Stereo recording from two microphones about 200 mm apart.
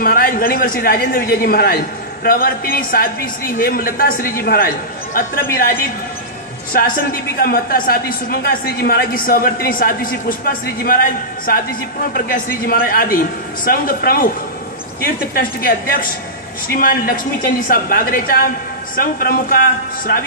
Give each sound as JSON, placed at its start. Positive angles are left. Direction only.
{"t": 0.0, "sound": "a man's voice", "side_deg": 45}
{"t": 7.3, "sound": "a man's voice", "side_deg": 50}